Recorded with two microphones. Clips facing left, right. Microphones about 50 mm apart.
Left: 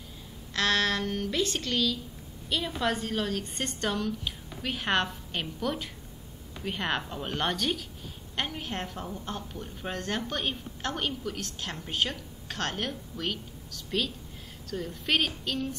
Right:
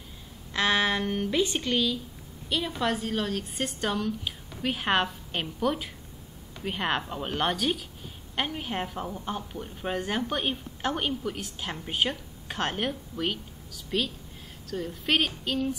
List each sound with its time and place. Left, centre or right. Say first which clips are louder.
0.5 s a woman's voice: right 2 dB; centre
2.5 s a woman's voice: right 1 dB; centre
13.8 s a woman's voice: right 1 dB; centre